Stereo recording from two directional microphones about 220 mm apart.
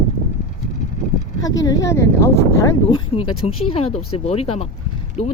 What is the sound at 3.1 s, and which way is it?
Speech, 25° left (ahead or behind).